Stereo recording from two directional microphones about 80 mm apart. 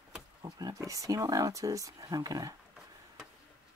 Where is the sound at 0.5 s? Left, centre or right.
Right.